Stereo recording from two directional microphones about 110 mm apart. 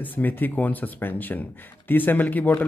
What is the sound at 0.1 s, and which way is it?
A man's voice, 15° left (ahead or behind).